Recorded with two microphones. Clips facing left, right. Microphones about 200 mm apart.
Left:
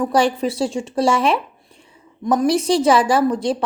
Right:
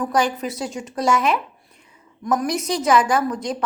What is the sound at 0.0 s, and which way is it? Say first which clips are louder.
Speech: left 4 dB; 30° left (ahead or behind).